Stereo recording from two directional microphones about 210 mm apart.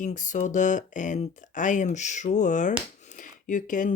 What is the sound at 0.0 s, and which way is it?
Speech, 35° left (ahead or behind).